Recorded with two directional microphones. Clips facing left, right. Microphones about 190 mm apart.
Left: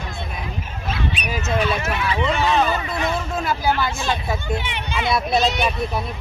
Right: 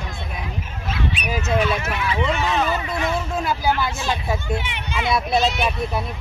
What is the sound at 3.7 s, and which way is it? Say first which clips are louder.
Speech: left 1 dB; 5° right (ahead or behind).